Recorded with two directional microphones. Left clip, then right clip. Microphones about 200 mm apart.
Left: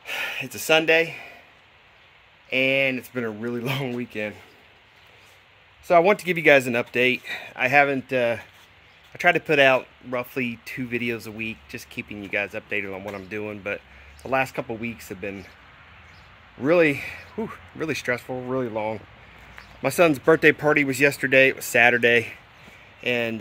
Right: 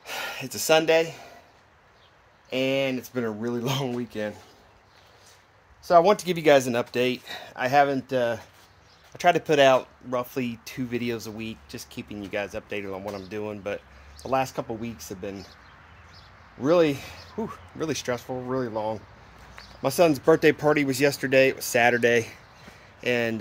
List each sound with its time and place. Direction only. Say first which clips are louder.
0.0 s speech: left 4 dB; centre (ahead or behind)
2.5 s speech: left 4 dB; 5° left (ahead or behind)
5.9 s speech: left 1 dB; 15° left (ahead or behind)
16.6 s speech: left 2 dB; 15° left (ahead or behind); by 23.4 s centre (ahead or behind)